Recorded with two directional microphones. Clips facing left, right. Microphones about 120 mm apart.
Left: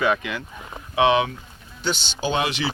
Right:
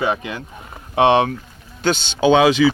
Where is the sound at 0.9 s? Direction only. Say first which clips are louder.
Right 4 dB; 60° right (ahead or behind).